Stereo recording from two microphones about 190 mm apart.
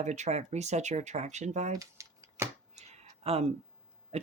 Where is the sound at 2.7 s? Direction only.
35° right (ahead or behind).